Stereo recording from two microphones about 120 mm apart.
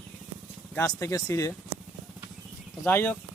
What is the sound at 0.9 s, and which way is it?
Speech, 25° left (ahead or behind).